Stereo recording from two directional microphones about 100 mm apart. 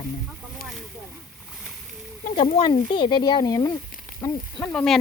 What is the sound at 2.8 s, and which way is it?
Speech, 55° left (ahead or behind).